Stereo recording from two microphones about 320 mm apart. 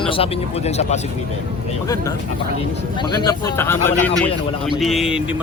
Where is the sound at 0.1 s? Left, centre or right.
Centre.